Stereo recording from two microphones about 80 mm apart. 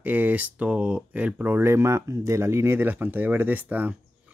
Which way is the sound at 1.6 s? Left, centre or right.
Right.